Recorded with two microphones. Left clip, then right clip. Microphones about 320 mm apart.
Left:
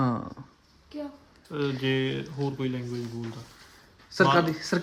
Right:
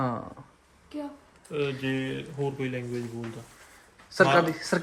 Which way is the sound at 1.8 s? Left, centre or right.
Left.